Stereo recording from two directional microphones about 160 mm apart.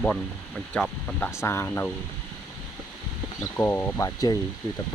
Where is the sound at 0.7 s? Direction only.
5° left (ahead or behind).